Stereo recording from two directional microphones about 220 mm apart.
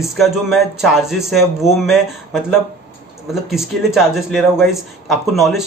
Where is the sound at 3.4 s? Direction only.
Centre (ahead or behind).